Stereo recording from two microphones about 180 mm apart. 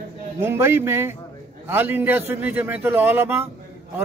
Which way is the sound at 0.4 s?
15° right (ahead or behind).